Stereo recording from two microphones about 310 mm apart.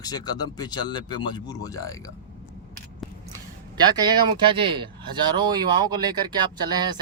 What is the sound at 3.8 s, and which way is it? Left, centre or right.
Speech, centre.